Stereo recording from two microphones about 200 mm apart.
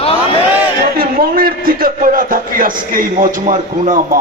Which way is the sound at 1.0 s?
45° right (ahead or behind).